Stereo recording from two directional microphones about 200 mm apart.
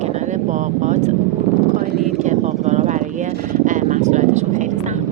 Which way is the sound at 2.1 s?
35° right (ahead or behind).